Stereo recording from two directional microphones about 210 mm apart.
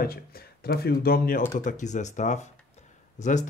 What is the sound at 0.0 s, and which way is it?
Speech, 45° left (ahead or behind).